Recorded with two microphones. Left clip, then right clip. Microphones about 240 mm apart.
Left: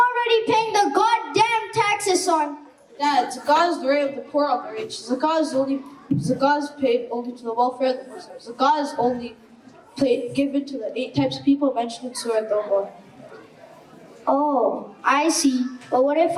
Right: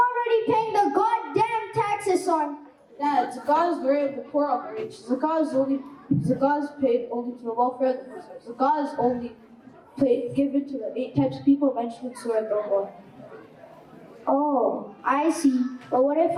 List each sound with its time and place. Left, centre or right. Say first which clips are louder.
0.0 s a sound: left 3 dB; centre
3.0 s a woman's voice: left 3 dB; centre
7.1 s a man's voice: left 2 dB; right
8.5 s a woman's voice: left 3 dB; centre
8.9 s a man's voice: left 2 dB; centre
9.9 s a woman's voice: left 2 dB; centre
14.3 s a sound: left 3 dB; right
15.0 s a woman's voice: left 3 dB; centre